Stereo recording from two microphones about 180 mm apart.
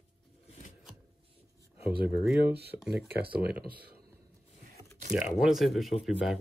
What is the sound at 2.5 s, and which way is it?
Speech, 65° right (ahead or behind).